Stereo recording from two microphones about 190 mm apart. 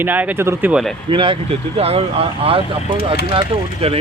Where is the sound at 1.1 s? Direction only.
25° right (ahead or behind).